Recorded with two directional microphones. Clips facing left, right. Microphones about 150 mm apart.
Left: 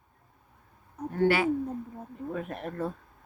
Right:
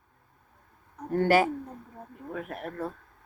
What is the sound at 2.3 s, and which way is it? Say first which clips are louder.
Speech: left 1 dB; 5° right (ahead or behind).